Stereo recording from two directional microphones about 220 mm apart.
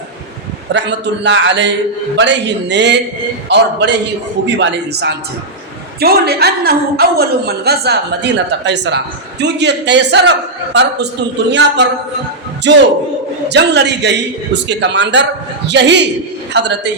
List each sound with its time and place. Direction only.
0.7 s a woman's voice: 55° right (ahead or behind)
12.7 s a woman's voice: 50° right (ahead or behind)